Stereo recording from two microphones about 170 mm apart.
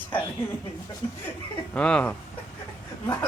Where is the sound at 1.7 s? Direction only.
5° left (ahead or behind).